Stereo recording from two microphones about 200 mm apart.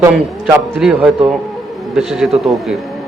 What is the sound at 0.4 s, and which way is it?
A man's voice, centre (ahead or behind).